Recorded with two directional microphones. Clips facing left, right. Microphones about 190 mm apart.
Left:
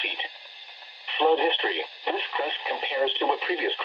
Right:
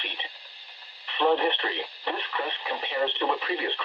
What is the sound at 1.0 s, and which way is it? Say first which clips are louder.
Speech: left 2 dB; 15° left (ahead or behind).